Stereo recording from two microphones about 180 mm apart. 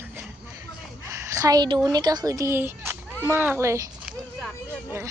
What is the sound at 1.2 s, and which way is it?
A woman's voice, 20° right (ahead or behind).